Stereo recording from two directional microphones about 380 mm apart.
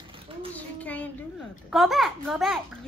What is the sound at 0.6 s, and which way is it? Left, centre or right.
Child singing, centre.